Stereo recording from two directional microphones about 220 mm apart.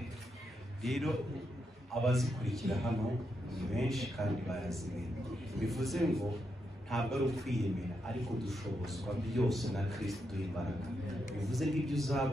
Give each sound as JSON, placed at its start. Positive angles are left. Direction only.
{"t": 0.8, "sound": "a man's voice", "side_deg": 0}